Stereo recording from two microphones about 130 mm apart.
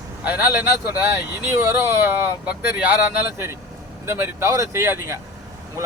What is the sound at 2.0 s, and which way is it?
Speech, 10° right (ahead or behind).